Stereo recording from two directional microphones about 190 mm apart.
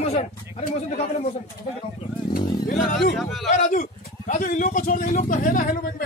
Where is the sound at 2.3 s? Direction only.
50° left (ahead or behind).